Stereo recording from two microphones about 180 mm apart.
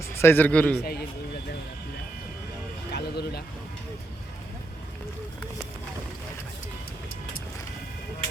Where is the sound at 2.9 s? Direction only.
65° left (ahead or behind).